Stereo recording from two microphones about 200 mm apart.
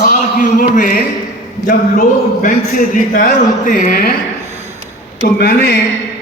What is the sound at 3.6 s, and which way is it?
Speech, 40° left (ahead or behind).